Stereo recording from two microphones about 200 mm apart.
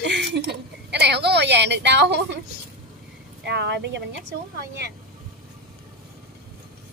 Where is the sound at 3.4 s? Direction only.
55° right (ahead or behind).